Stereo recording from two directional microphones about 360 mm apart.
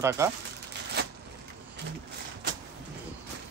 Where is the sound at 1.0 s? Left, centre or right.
Right.